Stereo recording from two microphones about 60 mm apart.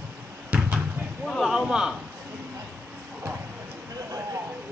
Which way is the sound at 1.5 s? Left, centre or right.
Centre.